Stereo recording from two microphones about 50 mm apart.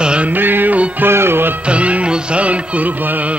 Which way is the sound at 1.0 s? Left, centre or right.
Right.